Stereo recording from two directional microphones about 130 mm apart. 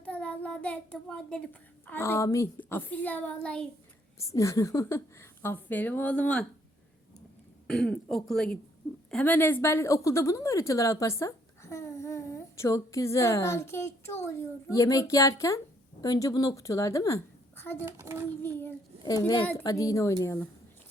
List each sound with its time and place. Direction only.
0.0 s a child's voice: 10° left (ahead or behind)
1.9 s a woman's voice: 20° left (ahead or behind)
4.2 s a woman's voice: 25° left (ahead or behind); by 6.5 s 10° left (ahead or behind)
7.7 s a woman's voice: 5° left (ahead or behind); by 17.2 s 25° left (ahead or behind)
17.8 s a child's voice: 20° right (ahead or behind)
18.4 s a woman's voice: 15° left (ahead or behind)
19.6 s a woman's voice: 25° left (ahead or behind)